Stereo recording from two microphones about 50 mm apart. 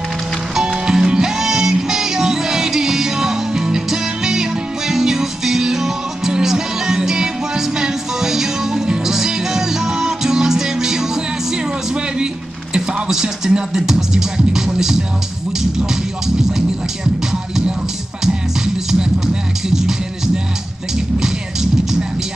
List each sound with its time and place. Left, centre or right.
0.6 s music: centre
11.5 s a sound: centre
12.7 s music: centre